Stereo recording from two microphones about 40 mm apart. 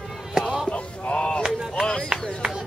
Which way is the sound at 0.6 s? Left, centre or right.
Left.